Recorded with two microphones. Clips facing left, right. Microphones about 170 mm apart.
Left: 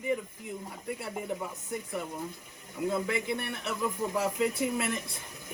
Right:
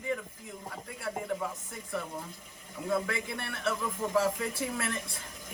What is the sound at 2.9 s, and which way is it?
Speech, 15° left (ahead or behind).